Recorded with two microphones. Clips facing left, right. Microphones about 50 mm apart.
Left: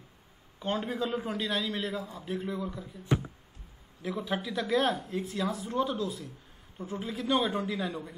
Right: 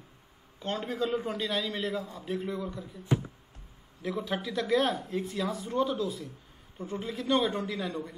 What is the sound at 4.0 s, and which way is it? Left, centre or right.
A man's voice, centre.